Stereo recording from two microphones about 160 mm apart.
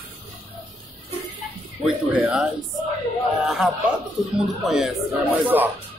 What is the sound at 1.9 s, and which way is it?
Speech, 10° right (ahead or behind).